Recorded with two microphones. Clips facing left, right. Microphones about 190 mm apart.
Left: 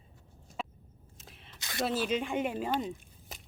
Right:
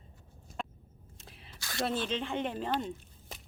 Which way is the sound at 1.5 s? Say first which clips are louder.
Even; 20° left (ahead or behind).